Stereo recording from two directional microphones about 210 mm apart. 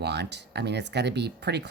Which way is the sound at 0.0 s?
55° right (ahead or behind).